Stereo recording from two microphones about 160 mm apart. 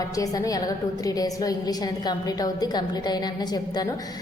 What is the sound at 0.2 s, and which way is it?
A woman's voice, 20° left (ahead or behind).